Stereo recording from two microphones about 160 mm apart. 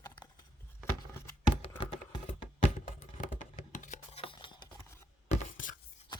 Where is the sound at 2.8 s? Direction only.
55° left (ahead or behind); by 4.7 s 30° left (ahead or behind).